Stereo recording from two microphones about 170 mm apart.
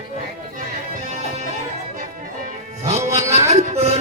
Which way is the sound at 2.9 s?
40° right (ahead or behind).